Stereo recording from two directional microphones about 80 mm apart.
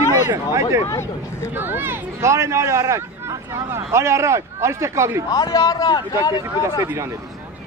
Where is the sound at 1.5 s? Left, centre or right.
Right.